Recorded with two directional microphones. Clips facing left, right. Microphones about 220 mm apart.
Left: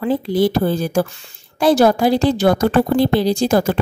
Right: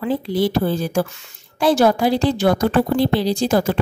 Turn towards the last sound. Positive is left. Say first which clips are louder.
# left 2 dB
turn(degrees=45)  # may be behind; listen again after turning